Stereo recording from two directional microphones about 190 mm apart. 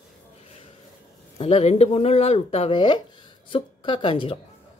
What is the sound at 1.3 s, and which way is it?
A woman's voice, 30° left (ahead or behind).